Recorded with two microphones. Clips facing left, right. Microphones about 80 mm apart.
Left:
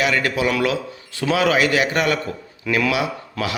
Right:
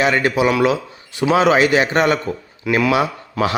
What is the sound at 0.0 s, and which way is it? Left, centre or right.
Speech, right.